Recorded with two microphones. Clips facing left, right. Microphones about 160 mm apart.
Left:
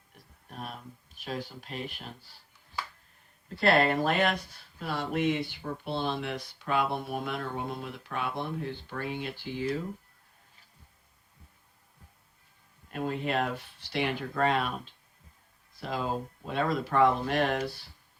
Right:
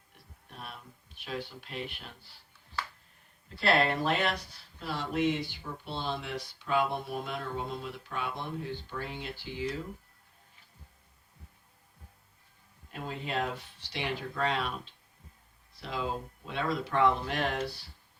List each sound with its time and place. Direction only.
0.5 s speech: 45° left (ahead or behind)
3.6 s speech: 50° left (ahead or behind)
12.9 s speech: 55° left (ahead or behind)
15.8 s speech: 50° left (ahead or behind)